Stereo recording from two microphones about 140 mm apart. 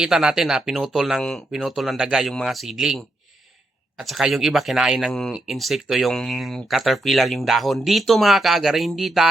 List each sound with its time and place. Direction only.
0.0 s speech: 5° right (ahead or behind)